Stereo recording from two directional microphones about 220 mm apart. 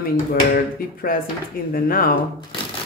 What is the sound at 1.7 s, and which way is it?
Speech, 40° left (ahead or behind).